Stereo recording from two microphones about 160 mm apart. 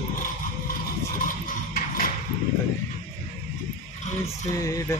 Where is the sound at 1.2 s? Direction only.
60° left (ahead or behind).